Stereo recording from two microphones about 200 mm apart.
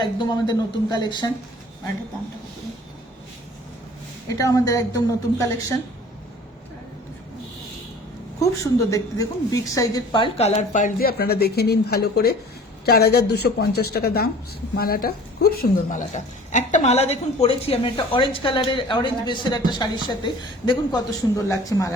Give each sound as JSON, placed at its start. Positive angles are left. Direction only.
{"t": 0.0, "sound": "a woman's voice", "side_deg": 20}
{"t": 4.4, "sound": "a woman's voice", "side_deg": 15}
{"t": 8.6, "sound": "a woman's voice", "side_deg": 15}